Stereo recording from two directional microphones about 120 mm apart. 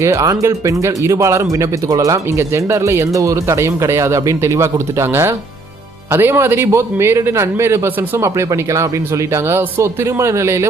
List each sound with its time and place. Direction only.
0.0 s speech: 25° right (ahead or behind)